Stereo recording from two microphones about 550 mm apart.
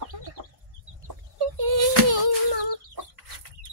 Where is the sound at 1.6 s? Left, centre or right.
Right.